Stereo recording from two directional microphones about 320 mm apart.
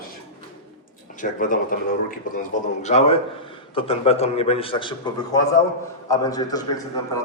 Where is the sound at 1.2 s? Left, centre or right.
Left.